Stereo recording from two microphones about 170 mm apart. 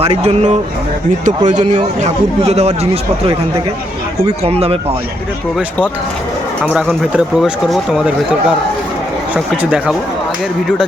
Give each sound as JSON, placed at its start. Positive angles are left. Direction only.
{"t": 0.0, "sound": "a man's voice", "side_deg": -35}
{"t": 4.4, "sound": "a man's voice", "side_deg": -35}
{"t": 6.7, "sound": "speech", "side_deg": -5}